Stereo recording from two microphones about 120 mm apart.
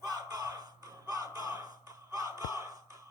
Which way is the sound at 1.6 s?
30° right (ahead or behind).